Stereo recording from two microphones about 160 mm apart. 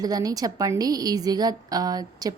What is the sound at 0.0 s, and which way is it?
A woman's voice, 25° right (ahead or behind).